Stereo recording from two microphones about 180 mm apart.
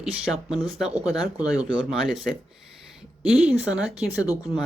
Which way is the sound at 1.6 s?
Centre (ahead or behind).